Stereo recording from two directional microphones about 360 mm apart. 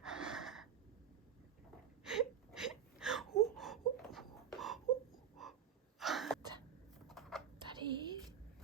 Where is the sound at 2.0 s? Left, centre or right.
Centre.